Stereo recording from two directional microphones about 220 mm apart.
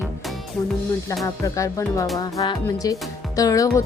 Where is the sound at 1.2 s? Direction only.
15° left (ahead or behind).